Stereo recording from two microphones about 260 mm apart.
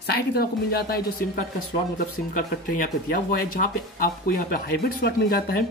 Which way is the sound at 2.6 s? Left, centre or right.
Left.